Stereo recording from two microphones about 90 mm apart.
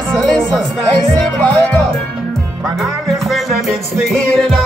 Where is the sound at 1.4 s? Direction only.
15° left (ahead or behind).